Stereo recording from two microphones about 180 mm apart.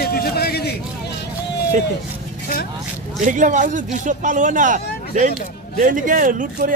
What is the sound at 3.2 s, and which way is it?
Speech, 45° right (ahead or behind).